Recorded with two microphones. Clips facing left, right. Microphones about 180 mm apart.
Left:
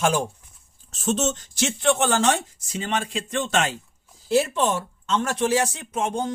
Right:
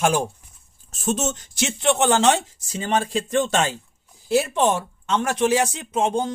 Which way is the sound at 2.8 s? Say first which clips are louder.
Right 4 dB; 40° right (ahead or behind).